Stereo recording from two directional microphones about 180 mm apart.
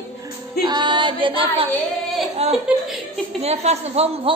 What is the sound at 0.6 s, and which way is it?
Music, 25° right (ahead or behind).